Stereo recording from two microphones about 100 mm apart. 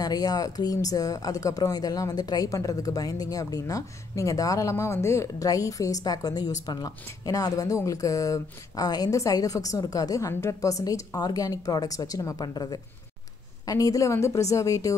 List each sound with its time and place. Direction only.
0.0 s speech: 40° left (ahead or behind)